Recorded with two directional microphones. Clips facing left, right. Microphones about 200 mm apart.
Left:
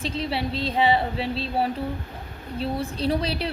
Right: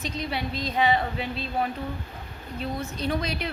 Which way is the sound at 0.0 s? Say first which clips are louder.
Left 3 dB; 30° left (ahead or behind).